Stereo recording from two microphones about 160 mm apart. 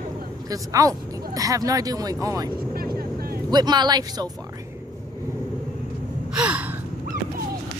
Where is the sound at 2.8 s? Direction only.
70° right (ahead or behind).